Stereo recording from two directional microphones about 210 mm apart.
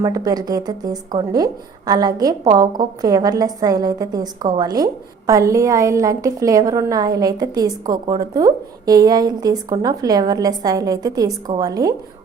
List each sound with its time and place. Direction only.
0.0 s a woman's voice: 20° right (ahead or behind)